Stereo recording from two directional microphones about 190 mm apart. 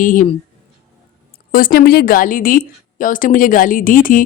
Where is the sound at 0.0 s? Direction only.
45° left (ahead or behind).